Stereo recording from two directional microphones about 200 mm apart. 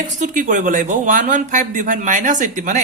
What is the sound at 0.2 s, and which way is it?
Speech, 40° right (ahead or behind).